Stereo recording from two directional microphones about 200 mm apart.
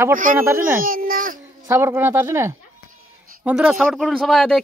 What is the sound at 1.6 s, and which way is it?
Speech, 15° right (ahead or behind).